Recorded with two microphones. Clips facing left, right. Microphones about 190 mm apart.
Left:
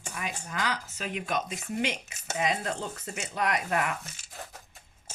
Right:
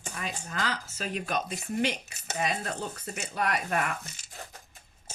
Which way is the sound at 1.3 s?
20° left (ahead or behind).